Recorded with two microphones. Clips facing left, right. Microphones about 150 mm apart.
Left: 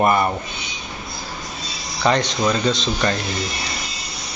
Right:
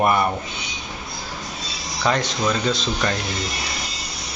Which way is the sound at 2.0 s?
5° right (ahead or behind).